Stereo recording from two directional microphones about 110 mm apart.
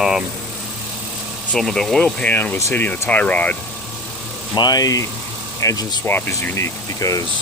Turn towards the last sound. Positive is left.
turn(degrees=30)  # may be behind; listen again after turning